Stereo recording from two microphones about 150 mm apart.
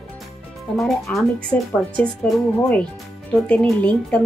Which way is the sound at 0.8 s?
Centre (ahead or behind).